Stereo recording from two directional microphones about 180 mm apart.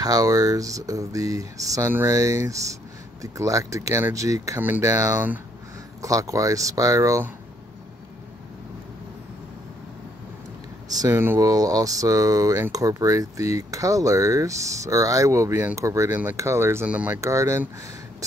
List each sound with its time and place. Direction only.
0.0 s speech: 20° right (ahead or behind)
10.9 s speech: 20° right (ahead or behind)